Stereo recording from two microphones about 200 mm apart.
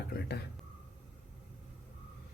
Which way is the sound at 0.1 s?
55° left (ahead or behind).